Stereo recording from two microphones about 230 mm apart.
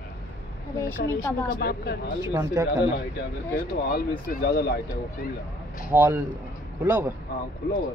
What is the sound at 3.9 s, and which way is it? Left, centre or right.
Speech, left.